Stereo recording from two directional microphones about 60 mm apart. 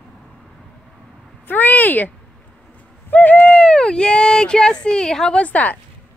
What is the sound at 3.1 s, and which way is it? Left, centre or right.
Bird, left.